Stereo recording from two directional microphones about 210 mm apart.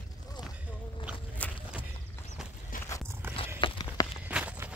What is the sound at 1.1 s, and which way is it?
Walk, 5° right (ahead or behind).